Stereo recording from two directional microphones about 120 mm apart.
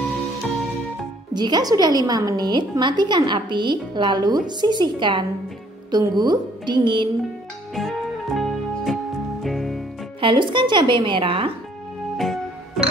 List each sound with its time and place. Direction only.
1.3 s a woman's voice: 35° right (ahead or behind)
7.7 s music: centre (ahead or behind)
10.2 s a woman's voice: 40° right (ahead or behind)
12.2 s music: centre (ahead or behind)